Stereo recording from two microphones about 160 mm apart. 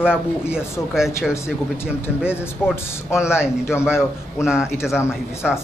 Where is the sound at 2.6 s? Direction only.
5° right (ahead or behind).